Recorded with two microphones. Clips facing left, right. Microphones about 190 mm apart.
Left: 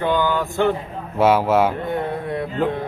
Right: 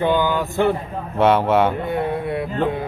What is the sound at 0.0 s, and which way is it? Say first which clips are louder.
Speech: right 1 dB; 15° right (ahead or behind).